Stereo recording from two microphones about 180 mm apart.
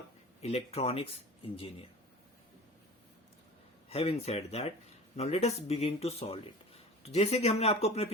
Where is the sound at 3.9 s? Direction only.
35° left (ahead or behind).